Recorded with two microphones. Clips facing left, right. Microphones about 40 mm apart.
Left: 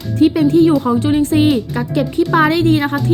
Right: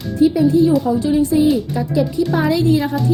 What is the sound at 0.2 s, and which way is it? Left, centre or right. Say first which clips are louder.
Speech: left 2 dB; left.